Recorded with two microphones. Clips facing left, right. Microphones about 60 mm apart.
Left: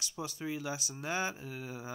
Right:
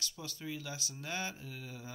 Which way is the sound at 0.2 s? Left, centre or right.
Centre.